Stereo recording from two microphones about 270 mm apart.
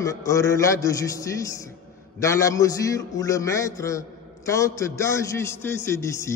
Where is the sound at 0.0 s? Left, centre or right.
Centre.